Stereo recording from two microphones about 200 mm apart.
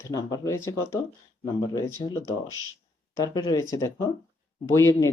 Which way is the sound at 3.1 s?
20° left (ahead or behind).